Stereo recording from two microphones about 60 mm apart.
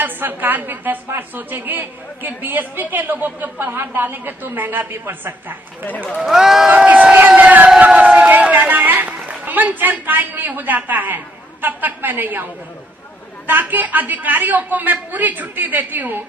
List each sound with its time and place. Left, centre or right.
0.0 s a woman's voice: right
5.8 s a man's voice: left
6.1 s speech: centre
6.7 s crowd: right
7.9 s a sound: right
11.6 s a woman's voice: right
13.5 s a man's voice: right